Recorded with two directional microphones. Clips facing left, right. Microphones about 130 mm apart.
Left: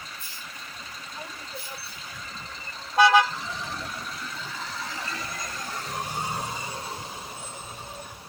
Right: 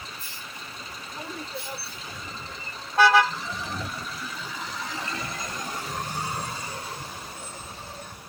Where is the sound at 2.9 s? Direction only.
15° left (ahead or behind).